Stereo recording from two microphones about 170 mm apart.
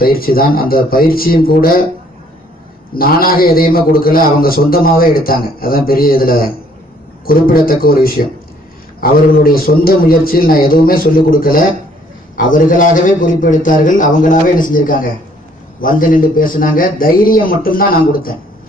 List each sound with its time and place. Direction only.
0.0 s a man's voice: 60° left (ahead or behind)
2.9 s a man's voice: 60° left (ahead or behind)